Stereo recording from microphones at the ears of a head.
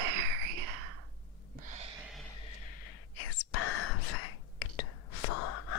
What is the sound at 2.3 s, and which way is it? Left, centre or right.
Whispering, left.